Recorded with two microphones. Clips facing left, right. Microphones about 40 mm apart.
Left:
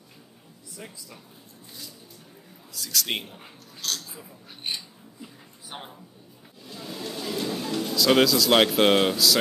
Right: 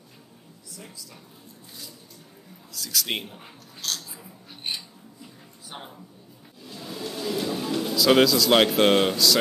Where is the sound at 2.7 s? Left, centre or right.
Centre.